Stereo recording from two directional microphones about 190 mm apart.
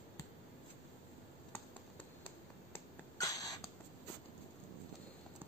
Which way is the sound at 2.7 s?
20° left (ahead or behind).